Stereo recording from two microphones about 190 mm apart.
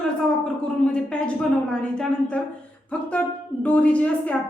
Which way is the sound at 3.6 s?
5° left (ahead or behind).